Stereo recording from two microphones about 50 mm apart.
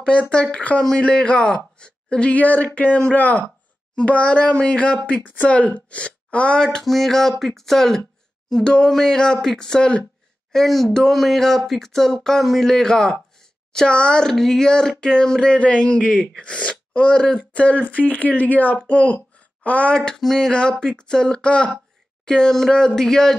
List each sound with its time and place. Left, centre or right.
0.0 s speech: left
6.6 s speech: centre
10.5 s speech: centre
13.7 s speech: centre
14.3 s speech: centre; by 19.9 s left
20.2 s speech: centre